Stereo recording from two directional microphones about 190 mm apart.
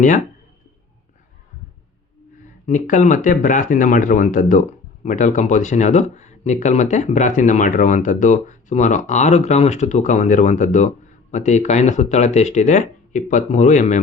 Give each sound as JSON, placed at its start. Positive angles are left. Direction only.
{"t": 2.6, "sound": "speech", "side_deg": 40}